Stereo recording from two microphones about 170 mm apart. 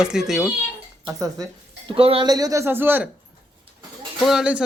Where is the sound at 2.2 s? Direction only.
20° right (ahead or behind).